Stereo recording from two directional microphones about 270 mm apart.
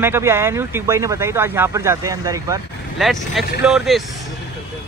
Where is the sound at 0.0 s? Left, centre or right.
Centre.